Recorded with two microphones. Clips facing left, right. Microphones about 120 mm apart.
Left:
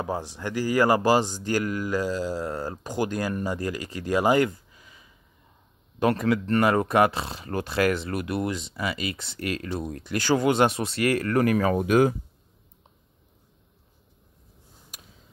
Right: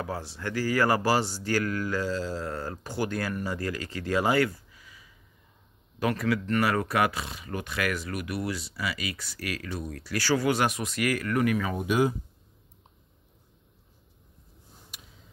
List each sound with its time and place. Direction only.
0.0 s speech: 15° left (ahead or behind); by 11.7 s 40° left (ahead or behind)
11.7 s speech: 50° left (ahead or behind)